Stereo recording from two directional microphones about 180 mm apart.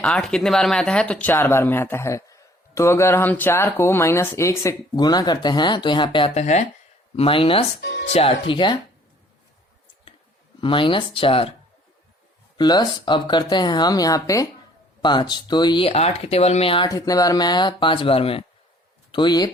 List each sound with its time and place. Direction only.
0.0 s speech: centre (ahead or behind); by 7.6 s 30° left (ahead or behind)
7.8 s speech: 65° left (ahead or behind)
8.0 s speech: 35° left (ahead or behind)
10.6 s speech: 30° left (ahead or behind)
12.5 s speech: 25° left (ahead or behind)